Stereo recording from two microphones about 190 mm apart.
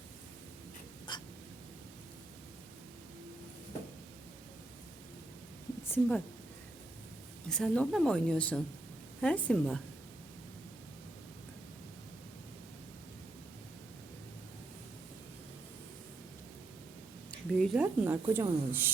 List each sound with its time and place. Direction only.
1.1 s hiccup: 25° left (ahead or behind)
5.9 s speech: 10° left (ahead or behind)
7.4 s a woman's voice: 5° left (ahead or behind)
17.5 s speech: centre (ahead or behind)